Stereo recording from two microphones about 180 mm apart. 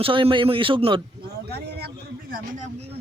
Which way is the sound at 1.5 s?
60° right (ahead or behind).